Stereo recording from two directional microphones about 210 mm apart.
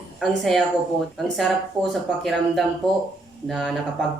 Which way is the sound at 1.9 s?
Centre (ahead or behind).